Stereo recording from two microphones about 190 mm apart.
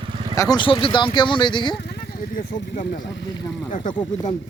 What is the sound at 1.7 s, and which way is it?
Vehicle, 60° left (ahead or behind).